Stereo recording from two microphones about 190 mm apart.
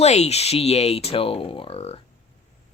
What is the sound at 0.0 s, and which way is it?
Speech, 35° left (ahead or behind).